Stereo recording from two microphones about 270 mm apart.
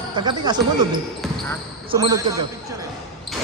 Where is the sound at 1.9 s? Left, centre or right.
Centre.